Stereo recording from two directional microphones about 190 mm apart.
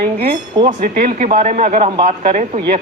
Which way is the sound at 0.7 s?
45° right (ahead or behind).